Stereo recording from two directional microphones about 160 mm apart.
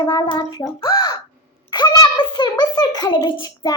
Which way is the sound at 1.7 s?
25° left (ahead or behind).